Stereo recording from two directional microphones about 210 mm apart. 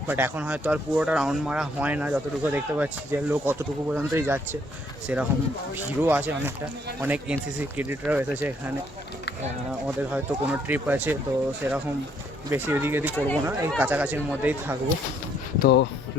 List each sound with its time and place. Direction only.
0.1 s speech: 5° right (ahead or behind)
9.8 s speech: 5° right (ahead or behind)
13.1 s speech: 10° left (ahead or behind)
13.4 s speech: 10° right (ahead or behind)
15.6 s speech: 55° left (ahead or behind)